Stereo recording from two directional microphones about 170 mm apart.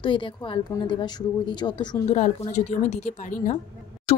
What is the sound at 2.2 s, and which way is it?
A woman's voice, 45° left (ahead or behind).